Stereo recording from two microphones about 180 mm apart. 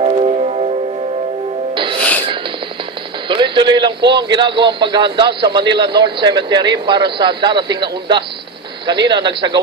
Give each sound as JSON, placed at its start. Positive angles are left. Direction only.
{"t": 0.0, "sound": "music", "side_deg": -40}
{"t": 2.0, "sound": "music", "side_deg": 10}
{"t": 3.3, "sound": "a man's voice", "side_deg": -25}